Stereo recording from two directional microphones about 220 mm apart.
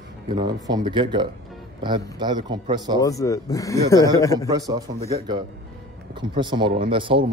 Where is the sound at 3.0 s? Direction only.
15° left (ahead or behind).